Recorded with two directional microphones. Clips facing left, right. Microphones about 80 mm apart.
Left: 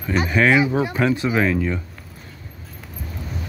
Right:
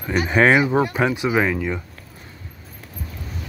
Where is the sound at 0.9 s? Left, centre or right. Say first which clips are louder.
Even; centre.